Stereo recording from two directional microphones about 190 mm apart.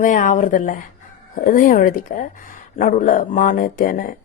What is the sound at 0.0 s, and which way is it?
A woman's voice, 45° left (ahead or behind).